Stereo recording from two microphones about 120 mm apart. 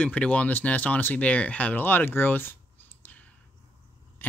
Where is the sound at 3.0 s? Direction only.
15° left (ahead or behind).